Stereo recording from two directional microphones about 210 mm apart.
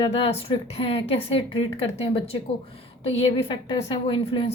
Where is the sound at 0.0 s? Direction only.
25° left (ahead or behind).